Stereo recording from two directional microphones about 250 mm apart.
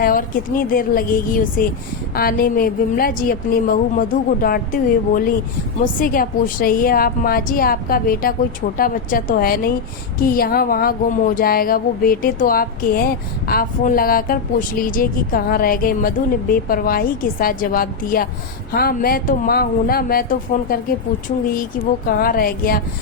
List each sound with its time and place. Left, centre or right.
0.0 s a woman's voice: left
21.2 s a woman's voice: left